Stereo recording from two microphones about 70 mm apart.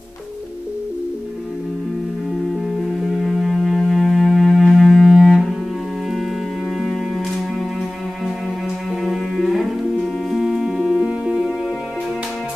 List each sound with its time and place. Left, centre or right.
2.9 s music: centre
9.0 s music: centre